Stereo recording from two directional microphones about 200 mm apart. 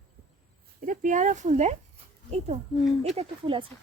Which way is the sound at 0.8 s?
40° right (ahead or behind).